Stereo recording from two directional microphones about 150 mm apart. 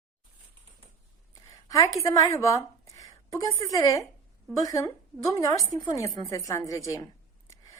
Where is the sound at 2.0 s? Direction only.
20° left (ahead or behind).